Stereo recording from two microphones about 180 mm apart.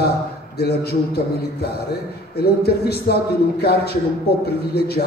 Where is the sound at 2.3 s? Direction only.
60° left (ahead or behind).